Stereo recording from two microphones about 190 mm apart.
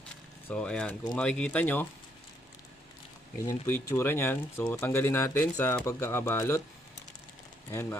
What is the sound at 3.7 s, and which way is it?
Speech, 10° left (ahead or behind).